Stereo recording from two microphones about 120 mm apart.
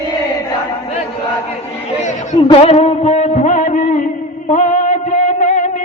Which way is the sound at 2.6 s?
60° left (ahead or behind).